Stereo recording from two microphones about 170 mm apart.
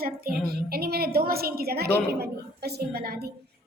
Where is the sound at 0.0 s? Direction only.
60° right (ahead or behind).